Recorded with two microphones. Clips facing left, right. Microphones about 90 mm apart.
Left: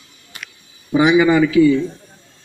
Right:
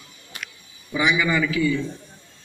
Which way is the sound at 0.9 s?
60° left (ahead or behind).